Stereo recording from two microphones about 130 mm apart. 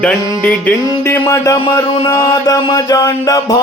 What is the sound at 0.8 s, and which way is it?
Music, 25° left (ahead or behind).